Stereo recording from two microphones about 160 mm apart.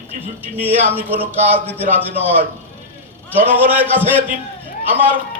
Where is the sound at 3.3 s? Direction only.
10° right (ahead or behind).